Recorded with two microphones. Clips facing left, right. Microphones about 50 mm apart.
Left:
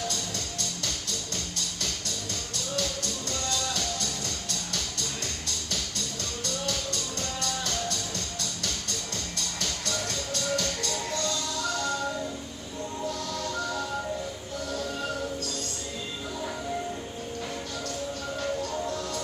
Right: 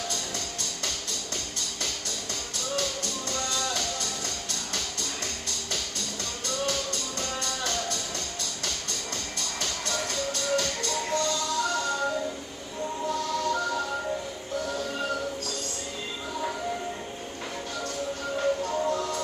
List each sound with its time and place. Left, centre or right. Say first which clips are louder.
2.7 s music: right 1 dB; right
6.4 s music: right 3 dB; right
9.6 s music: right 1 dB; right
13.1 s music: right 5 dB; right
18.4 s music: right 5 dB; right